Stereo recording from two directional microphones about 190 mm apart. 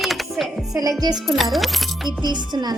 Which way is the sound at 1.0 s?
20° right (ahead or behind).